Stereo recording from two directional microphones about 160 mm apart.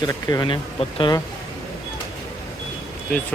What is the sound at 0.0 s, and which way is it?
Speech, 25° left (ahead or behind).